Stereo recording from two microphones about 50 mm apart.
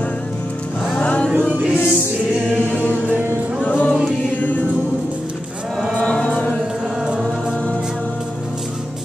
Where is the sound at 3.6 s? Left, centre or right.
Left.